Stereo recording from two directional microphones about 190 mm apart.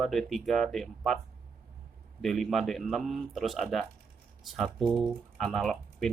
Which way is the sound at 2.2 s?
Centre (ahead or behind).